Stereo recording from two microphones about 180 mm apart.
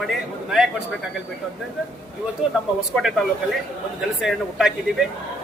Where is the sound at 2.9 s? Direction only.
Centre (ahead or behind).